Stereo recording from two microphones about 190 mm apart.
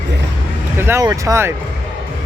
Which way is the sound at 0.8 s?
15° right (ahead or behind).